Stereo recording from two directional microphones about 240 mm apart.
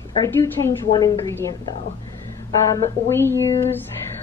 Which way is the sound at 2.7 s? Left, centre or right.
Centre.